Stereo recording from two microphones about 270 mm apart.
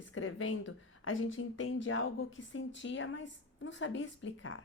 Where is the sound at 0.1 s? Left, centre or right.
Left.